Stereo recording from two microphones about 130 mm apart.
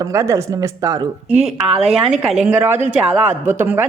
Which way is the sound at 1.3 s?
55° right (ahead or behind).